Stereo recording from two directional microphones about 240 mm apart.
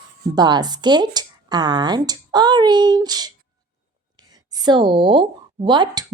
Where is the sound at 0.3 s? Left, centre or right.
Centre.